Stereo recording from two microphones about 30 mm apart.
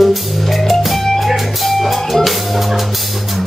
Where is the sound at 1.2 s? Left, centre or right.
Centre.